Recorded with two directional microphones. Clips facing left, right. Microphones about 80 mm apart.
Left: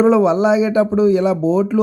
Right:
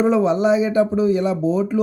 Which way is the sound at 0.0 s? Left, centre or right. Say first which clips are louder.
Left 4 dB; left.